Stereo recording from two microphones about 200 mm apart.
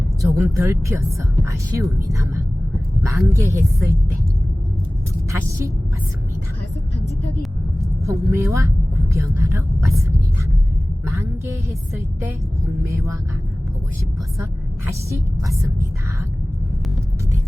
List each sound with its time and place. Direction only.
0.2 s a woman's voice: 15° right (ahead or behind)
8.0 s speech: 15° right (ahead or behind)
11.0 s a sound: 15° right (ahead or behind)
12.8 s speech: 15° right (ahead or behind)
14.8 s speech: 15° right (ahead or behind)